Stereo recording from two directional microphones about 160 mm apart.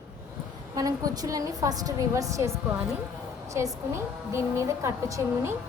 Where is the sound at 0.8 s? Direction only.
20° right (ahead or behind).